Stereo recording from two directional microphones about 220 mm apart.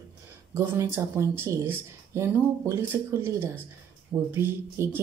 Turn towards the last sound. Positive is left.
turn(degrees=-10)  # may be behind; listen again after turning